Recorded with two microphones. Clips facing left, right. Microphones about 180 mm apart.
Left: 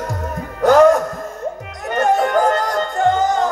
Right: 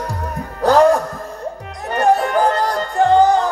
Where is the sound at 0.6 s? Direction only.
35° right (ahead or behind).